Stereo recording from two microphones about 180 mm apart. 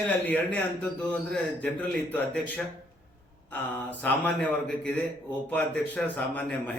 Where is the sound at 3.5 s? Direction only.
10° left (ahead or behind).